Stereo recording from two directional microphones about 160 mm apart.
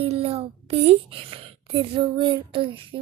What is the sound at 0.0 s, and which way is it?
A woman's voice, 35° right (ahead or behind).